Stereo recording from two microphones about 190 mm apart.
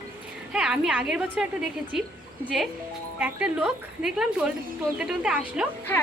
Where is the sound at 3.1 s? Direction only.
5° right (ahead or behind).